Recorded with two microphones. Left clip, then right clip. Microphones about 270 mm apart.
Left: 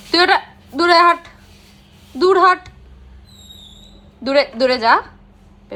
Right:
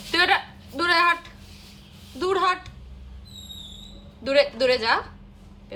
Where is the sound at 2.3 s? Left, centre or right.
Centre.